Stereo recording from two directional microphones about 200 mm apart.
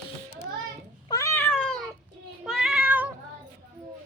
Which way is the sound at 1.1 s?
15° left (ahead or behind).